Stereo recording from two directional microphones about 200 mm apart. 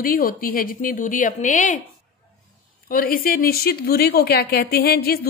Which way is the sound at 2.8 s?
45° left (ahead or behind).